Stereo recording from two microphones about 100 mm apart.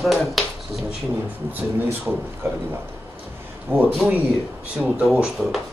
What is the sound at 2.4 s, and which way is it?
Speech, 25° right (ahead or behind).